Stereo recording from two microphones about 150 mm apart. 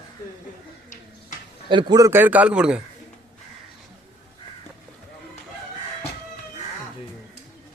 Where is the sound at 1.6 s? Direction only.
30° right (ahead or behind).